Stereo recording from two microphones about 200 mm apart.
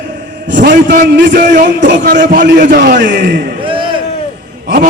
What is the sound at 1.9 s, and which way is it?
Speech, 60° right (ahead or behind).